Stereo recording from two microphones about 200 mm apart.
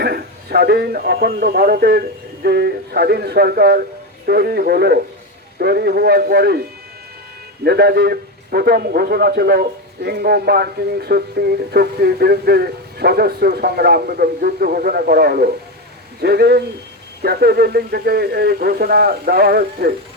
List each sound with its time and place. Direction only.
0.0 s a man's voice: 50° right (ahead or behind)